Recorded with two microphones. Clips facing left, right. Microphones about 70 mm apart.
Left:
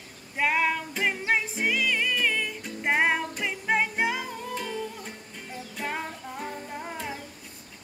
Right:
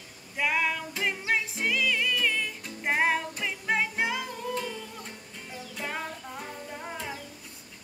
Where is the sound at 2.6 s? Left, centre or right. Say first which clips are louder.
Left 2 dB; centre.